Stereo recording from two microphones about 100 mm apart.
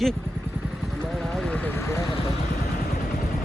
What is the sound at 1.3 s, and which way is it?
Vehicle, 10° left (ahead or behind).